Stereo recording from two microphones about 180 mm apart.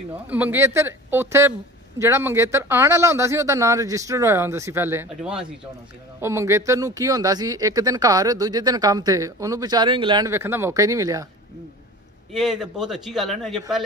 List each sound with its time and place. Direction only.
0.3 s speech: 10° right (ahead or behind); by 10.3 s 25° right (ahead or behind)
10.3 s speech: 15° right (ahead or behind)
12.4 s a man's voice: centre (ahead or behind)